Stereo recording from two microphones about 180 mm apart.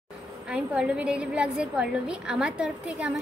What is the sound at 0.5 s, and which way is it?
A woman's voice, 5° right (ahead or behind).